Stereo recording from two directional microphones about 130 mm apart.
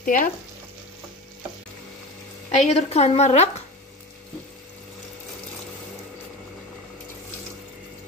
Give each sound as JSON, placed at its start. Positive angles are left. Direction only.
{"t": 0.0, "sound": "frying", "side_deg": 90}
{"t": 2.6, "sound": "a woman's voice", "side_deg": 60}